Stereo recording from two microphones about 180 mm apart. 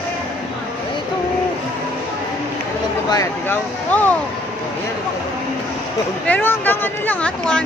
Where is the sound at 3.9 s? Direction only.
10° left (ahead or behind).